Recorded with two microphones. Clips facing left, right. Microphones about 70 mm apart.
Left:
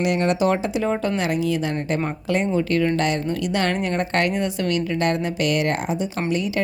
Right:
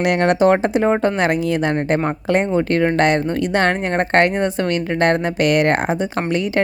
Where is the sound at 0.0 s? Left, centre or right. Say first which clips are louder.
Right 5 dB; right.